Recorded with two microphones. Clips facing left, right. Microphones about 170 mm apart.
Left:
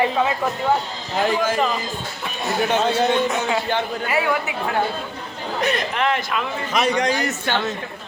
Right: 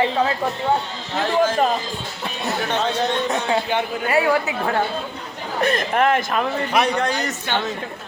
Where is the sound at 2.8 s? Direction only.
5° left (ahead or behind).